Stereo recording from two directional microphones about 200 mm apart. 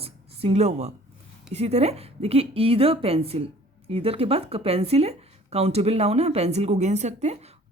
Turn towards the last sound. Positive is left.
turn(degrees=-35)  # may be behind; listen again after turning